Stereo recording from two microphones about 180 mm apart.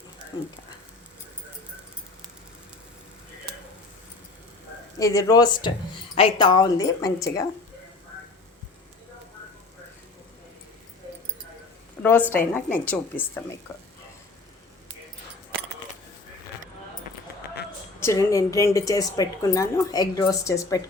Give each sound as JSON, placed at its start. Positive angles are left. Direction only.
{"t": 4.9, "sound": "a woman's voice", "side_deg": 20}
{"t": 12.0, "sound": "speech", "side_deg": 10}
{"t": 18.0, "sound": "a woman's voice", "side_deg": 15}